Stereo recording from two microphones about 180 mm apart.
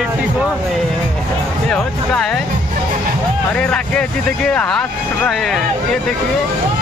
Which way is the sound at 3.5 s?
5° left (ahead or behind).